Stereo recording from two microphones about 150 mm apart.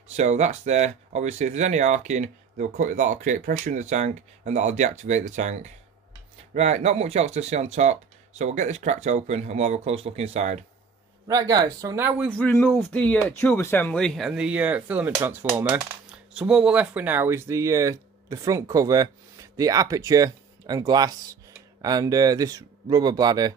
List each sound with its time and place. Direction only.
0.1 s speech: 50° right (ahead or behind)
11.2 s speech: 25° right (ahead or behind)
12.3 s speech: 10° left (ahead or behind); by 23.5 s 25° right (ahead or behind)